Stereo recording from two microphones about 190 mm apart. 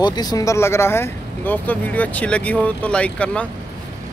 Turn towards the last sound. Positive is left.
turn(degrees=5)  # may be behind; listen again after turning